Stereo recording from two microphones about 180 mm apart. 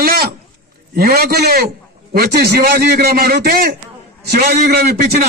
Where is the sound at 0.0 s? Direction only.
55° right (ahead or behind).